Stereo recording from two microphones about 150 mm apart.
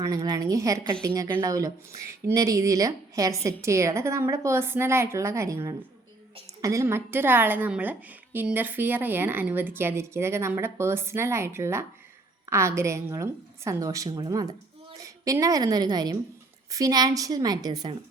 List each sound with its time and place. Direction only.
0.0 s a woman's voice: 25° right (ahead or behind)